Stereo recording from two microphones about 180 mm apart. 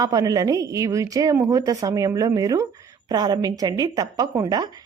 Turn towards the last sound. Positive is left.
turn(degrees=-20)  # may be behind; listen again after turning